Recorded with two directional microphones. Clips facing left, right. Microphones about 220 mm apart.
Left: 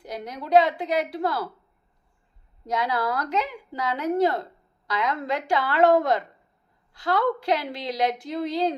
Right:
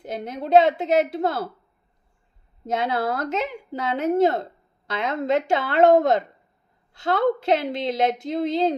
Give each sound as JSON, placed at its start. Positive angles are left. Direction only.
{"t": 0.0, "sound": "a woman's voice", "side_deg": -25}
{"t": 2.6, "sound": "a woman's voice", "side_deg": -25}